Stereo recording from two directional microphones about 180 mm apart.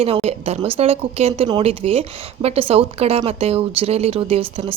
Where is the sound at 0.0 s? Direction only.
35° right (ahead or behind).